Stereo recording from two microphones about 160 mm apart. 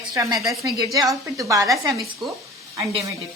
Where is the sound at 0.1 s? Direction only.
20° right (ahead or behind).